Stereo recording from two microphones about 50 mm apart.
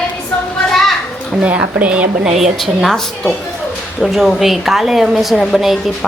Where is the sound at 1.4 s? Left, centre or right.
Right.